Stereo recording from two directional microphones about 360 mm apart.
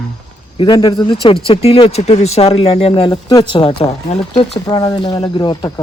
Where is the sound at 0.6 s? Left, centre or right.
Centre.